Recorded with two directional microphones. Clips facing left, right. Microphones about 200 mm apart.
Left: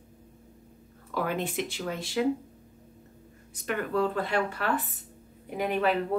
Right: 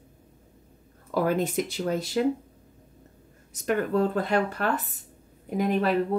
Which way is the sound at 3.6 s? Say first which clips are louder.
Right 4 dB; 40° right (ahead or behind).